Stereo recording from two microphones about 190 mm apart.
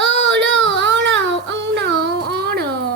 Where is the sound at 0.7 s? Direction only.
70° right (ahead or behind).